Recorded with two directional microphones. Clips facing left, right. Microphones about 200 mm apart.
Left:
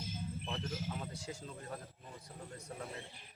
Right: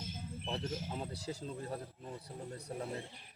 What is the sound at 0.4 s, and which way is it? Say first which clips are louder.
Speech: right 4 dB; 30° right (ahead or behind).